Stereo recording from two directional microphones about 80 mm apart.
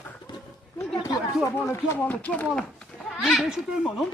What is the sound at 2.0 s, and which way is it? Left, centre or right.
Speech, centre.